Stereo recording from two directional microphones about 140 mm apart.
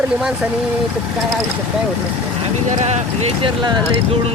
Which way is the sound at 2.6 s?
55° right (ahead or behind).